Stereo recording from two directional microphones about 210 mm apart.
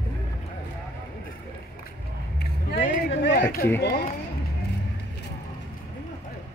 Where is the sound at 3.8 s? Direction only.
50° left (ahead or behind).